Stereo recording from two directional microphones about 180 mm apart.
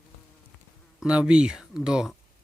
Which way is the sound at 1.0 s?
5° right (ahead or behind).